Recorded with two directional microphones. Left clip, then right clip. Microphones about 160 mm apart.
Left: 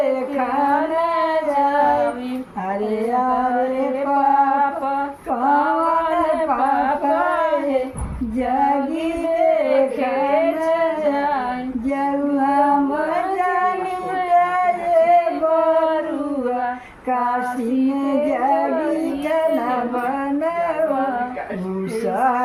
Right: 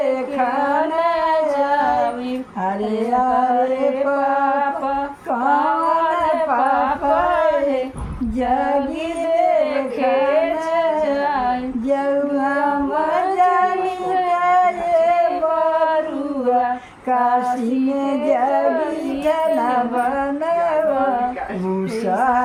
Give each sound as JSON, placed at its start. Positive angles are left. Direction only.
{"t": 9.6, "sound": "carnatic music", "side_deg": -10}
{"t": 10.7, "sound": "singing", "side_deg": -45}
{"t": 14.3, "sound": "singing", "side_deg": -45}
{"t": 17.1, "sound": "female singing", "side_deg": -40}
{"t": 18.1, "sound": "music", "side_deg": -45}